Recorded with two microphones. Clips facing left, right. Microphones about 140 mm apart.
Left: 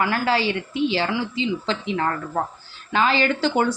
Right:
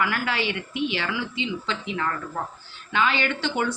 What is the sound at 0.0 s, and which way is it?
A man's voice, 35° left (ahead or behind).